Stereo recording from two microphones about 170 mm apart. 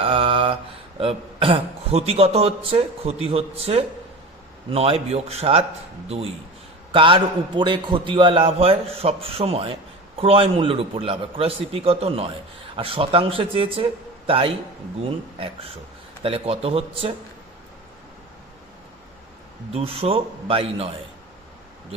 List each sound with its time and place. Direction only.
0.0 s mantra: 30° right (ahead or behind)
0.9 s a man's voice: 35° right (ahead or behind)
6.9 s a man's voice: 30° right (ahead or behind)
19.7 s a man's voice: 35° right (ahead or behind)